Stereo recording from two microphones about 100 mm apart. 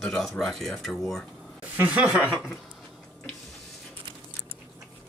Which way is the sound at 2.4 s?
Centre (ahead or behind).